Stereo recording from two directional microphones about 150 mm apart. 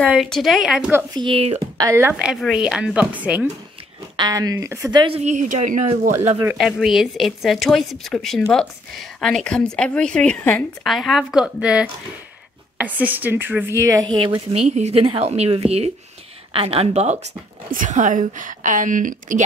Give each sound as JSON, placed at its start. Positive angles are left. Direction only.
{"t": 0.0, "sound": "a woman's voice", "side_deg": 0}
{"t": 1.1, "sound": "speech", "side_deg": -35}
{"t": 1.8, "sound": "a woman's voice", "side_deg": -20}
{"t": 4.2, "sound": "speech", "side_deg": -25}
{"t": 5.0, "sound": "a woman's voice", "side_deg": -45}
{"t": 6.6, "sound": "a woman's voice", "side_deg": 0}
{"t": 14.0, "sound": "speech", "side_deg": -35}
{"t": 14.7, "sound": "a woman's voice", "side_deg": -50}
{"t": 17.6, "sound": "a woman's voice", "side_deg": -60}